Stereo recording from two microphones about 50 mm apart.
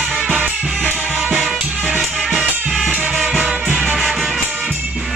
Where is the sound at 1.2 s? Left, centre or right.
Centre.